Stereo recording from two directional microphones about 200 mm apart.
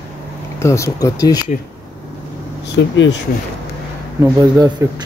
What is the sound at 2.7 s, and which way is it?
Speech, 65° left (ahead or behind).